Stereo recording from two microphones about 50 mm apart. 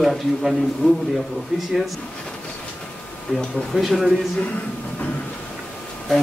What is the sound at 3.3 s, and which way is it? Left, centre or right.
Speech, centre.